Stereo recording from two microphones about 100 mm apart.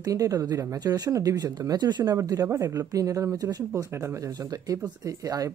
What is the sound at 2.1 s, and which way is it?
A woman's voice, 35° right (ahead or behind).